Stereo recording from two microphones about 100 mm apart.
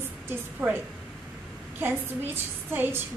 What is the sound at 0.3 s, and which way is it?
Speech, 20° right (ahead or behind).